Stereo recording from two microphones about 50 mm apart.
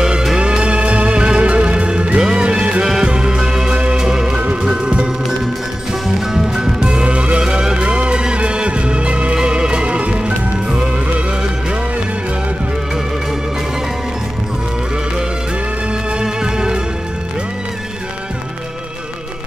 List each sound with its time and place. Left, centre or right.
0.0 s music: centre
16.2 s music: centre